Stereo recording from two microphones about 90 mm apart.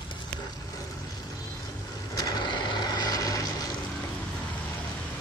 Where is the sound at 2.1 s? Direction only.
50° left (ahead or behind).